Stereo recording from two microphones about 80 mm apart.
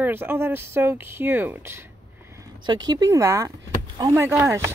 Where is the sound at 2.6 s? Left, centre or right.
Right.